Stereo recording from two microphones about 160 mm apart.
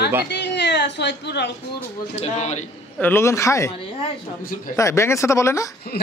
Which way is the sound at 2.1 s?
45° left (ahead or behind).